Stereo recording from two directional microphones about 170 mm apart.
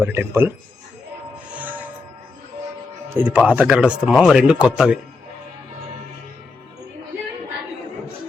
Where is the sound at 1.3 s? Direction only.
10° right (ahead or behind).